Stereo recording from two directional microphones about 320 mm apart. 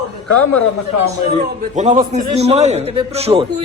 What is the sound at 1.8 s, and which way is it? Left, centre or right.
A man's voice, right.